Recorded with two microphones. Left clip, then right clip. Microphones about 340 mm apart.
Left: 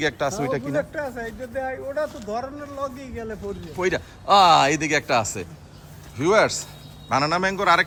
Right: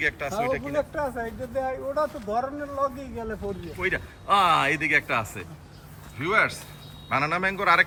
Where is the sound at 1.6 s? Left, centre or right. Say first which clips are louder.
Even; right.